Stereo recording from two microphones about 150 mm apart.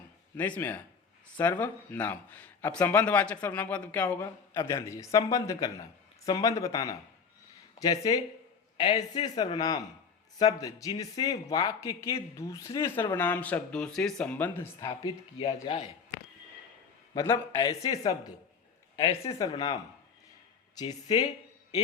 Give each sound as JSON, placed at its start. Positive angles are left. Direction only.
{"t": 0.3, "sound": "speech", "side_deg": 10}
{"t": 14.8, "sound": "speech", "side_deg": 30}
{"t": 15.6, "sound": "speech", "side_deg": 40}
{"t": 17.2, "sound": "speech", "side_deg": 20}
{"t": 19.4, "sound": "speech", "side_deg": 25}
{"t": 20.7, "sound": "speech", "side_deg": 25}